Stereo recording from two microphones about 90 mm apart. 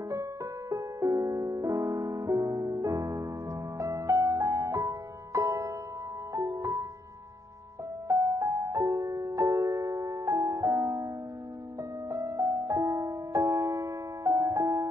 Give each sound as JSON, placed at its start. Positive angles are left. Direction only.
{"t": 0.1, "sound": "music", "side_deg": -35}
{"t": 8.1, "sound": "music", "side_deg": -40}
{"t": 12.1, "sound": "music", "side_deg": -35}